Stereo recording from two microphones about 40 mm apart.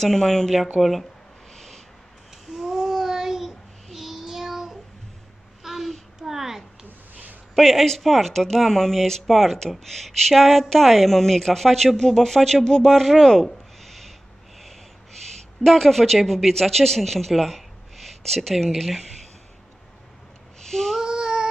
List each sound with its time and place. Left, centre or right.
0.0 s speech: centre
0.7 s speech: centre
1.5 s a sound: centre
2.5 s child singing: centre
5.6 s a sound: centre
7.5 s speech: centre
15.6 s speech: centre
20.6 s child singing: centre
21.0 s child singing: centre